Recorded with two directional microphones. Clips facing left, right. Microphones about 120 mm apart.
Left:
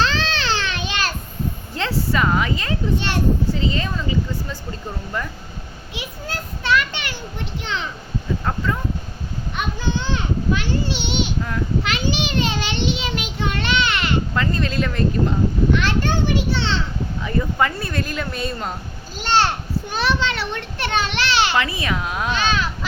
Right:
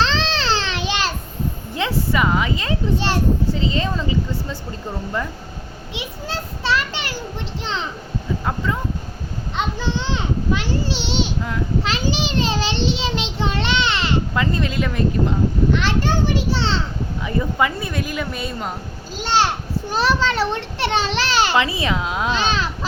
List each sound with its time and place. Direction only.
0.0 s baby cry: 30° right (ahead or behind)
1.7 s a child's voice: 15° right (ahead or behind)
5.9 s a child's voice: 25° right (ahead or behind)
9.6 s a sound: 25° right (ahead or behind)
11.8 s child singing: 35° right (ahead or behind)
14.3 s speech: 15° right (ahead or behind)
15.7 s a child's voice: 30° right (ahead or behind)
17.2 s speech: 15° right (ahead or behind)
19.9 s a child's voice: 40° right (ahead or behind)
21.1 s a child's voice: 40° right (ahead or behind)
21.5 s a child's voice: 20° right (ahead or behind)